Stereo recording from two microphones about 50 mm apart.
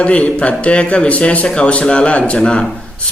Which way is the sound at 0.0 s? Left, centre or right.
Left.